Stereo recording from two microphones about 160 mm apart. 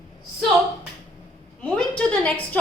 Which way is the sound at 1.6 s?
10° left (ahead or behind).